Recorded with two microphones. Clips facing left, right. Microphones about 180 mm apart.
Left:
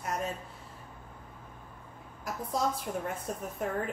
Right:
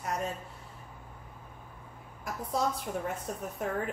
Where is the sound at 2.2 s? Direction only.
Centre (ahead or behind).